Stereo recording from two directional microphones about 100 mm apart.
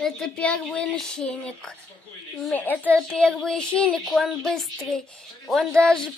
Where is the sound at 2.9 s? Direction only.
5° left (ahead or behind).